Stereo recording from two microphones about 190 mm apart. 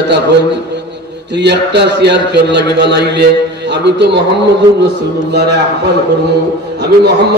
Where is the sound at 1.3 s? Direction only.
65° right (ahead or behind).